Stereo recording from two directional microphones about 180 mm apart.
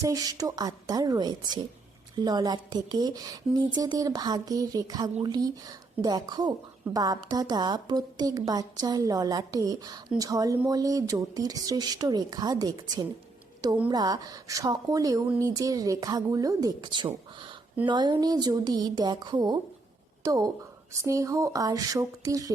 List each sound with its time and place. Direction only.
0.0 s a woman's voice: 20° right (ahead or behind)